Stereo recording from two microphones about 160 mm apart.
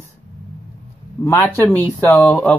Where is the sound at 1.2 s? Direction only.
10° left (ahead or behind).